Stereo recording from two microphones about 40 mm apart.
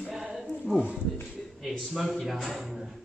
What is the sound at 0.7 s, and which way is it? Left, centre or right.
Speech, right.